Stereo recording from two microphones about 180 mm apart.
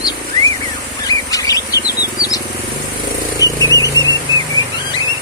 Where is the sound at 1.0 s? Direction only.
20° left (ahead or behind).